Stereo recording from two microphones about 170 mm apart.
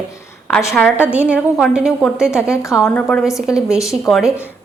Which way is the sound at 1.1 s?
10° right (ahead or behind).